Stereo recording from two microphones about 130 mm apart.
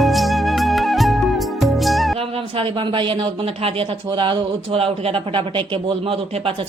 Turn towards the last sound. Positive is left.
turn(degrees=-40)  # may be behind; listen again after turning